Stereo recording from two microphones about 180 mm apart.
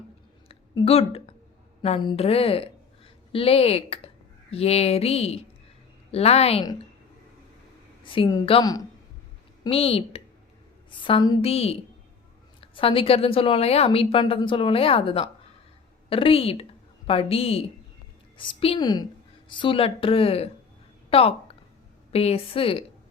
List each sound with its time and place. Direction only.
0.4 s a sound: 35° left (ahead or behind)
1.8 s a woman's voice: 30° left (ahead or behind)
8.0 s a woman's voice: 30° left (ahead or behind)
9.6 s a woman's voice: 30° left (ahead or behind)